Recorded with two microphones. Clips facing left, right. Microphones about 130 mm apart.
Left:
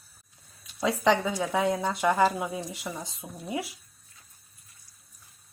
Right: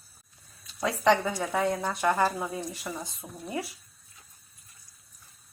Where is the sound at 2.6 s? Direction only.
Centre (ahead or behind).